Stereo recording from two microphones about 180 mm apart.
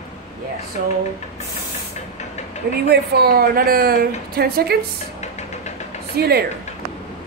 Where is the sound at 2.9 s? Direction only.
65° right (ahead or behind).